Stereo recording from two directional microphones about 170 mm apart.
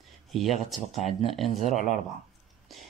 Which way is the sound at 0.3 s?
Centre (ahead or behind).